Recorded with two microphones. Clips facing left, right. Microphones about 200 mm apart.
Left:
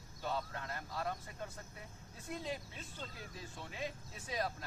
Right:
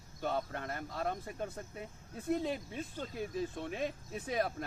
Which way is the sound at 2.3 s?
60° right (ahead or behind).